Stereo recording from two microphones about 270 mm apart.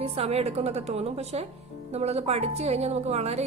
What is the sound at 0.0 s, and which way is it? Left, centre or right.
Speech, right.